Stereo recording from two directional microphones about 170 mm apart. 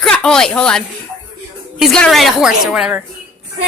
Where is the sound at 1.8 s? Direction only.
Centre (ahead or behind).